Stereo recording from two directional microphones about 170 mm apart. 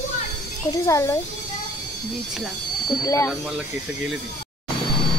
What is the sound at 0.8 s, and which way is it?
Speech, 20° left (ahead or behind).